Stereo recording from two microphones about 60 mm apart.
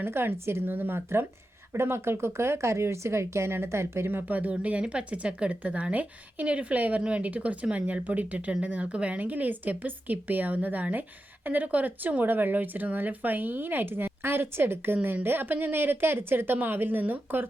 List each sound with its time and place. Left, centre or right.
0.0 s speech: right
4.3 s speech: right